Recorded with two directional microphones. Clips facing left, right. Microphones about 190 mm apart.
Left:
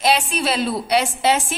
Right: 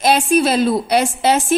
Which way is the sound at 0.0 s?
45° right (ahead or behind).